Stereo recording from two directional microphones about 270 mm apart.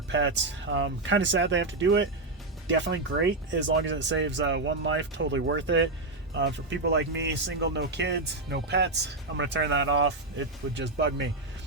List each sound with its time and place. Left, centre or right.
0.1 s speech: right